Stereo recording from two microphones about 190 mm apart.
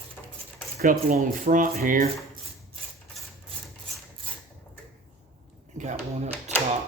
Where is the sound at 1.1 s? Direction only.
45° right (ahead or behind).